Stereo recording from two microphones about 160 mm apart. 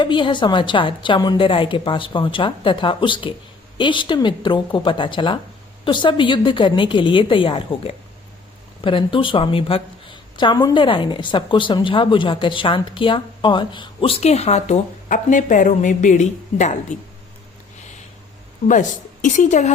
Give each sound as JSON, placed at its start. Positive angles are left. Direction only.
{"t": 0.0, "sound": "a woman's voice", "side_deg": 30}
{"t": 18.7, "sound": "a woman's voice", "side_deg": 50}